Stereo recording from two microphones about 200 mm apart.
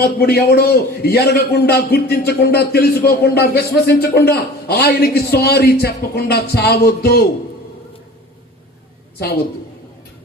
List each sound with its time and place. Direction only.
0.0 s a man's voice: 50° left (ahead or behind)
9.1 s a woman's voice: 50° left (ahead or behind)